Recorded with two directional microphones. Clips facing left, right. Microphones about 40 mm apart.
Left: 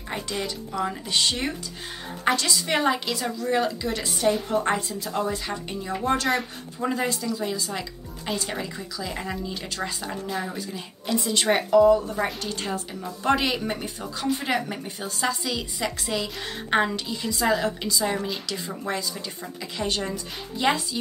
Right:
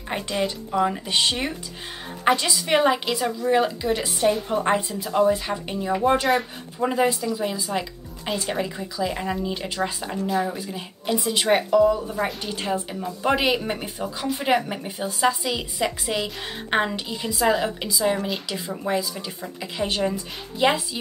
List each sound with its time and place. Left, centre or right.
0.1 s speech: right
10.2 s speech: centre
11.4 s speech: centre
12.4 s speech: centre